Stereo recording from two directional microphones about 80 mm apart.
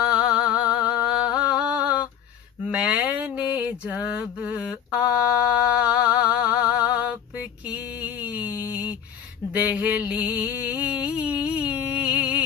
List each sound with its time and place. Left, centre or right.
0.0 s music: centre
2.6 s mantra: centre
9.5 s a sound: centre